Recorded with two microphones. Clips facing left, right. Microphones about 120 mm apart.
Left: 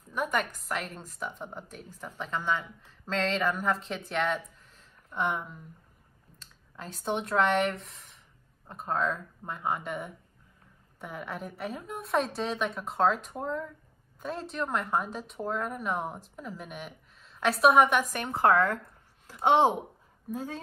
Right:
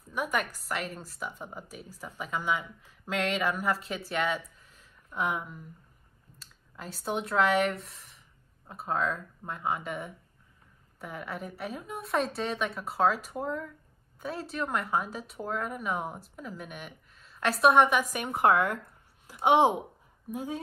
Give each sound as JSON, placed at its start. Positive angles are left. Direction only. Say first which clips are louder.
{"t": 0.1, "sound": "a woman's voice", "louder": "left 1 dB", "side_deg": -5}
{"t": 18.1, "sound": "speech", "louder": "left 1 dB", "side_deg": -15}